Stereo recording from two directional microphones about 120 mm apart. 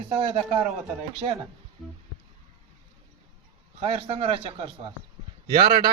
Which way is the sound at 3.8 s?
55° right (ahead or behind).